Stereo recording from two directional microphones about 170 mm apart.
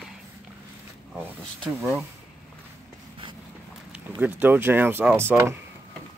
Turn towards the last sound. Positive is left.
turn(degrees=-15)  # may be behind; listen again after turning